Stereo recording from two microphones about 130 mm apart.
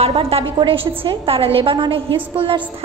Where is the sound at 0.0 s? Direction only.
50° right (ahead or behind).